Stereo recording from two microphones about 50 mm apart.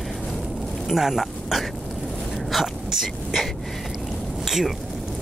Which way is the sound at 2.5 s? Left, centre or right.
Centre.